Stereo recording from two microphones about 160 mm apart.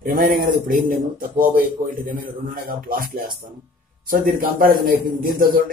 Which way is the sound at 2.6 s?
65° right (ahead or behind).